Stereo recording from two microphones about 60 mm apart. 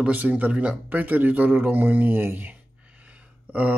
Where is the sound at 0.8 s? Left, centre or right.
Right.